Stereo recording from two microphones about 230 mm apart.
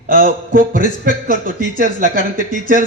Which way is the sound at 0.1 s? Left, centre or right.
Right.